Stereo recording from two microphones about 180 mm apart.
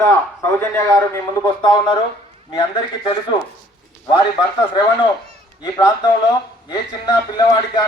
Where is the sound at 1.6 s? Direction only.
25° left (ahead or behind).